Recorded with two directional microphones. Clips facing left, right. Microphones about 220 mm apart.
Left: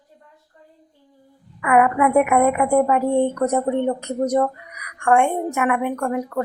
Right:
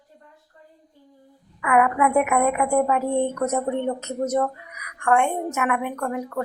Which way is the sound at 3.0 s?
15° left (ahead or behind).